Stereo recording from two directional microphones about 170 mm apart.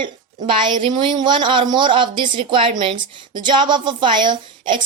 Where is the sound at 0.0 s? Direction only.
30° right (ahead or behind).